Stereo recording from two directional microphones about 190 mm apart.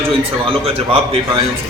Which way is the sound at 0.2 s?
30° right (ahead or behind).